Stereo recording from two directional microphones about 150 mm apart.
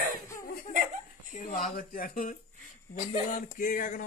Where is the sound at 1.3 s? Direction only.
60° left (ahead or behind).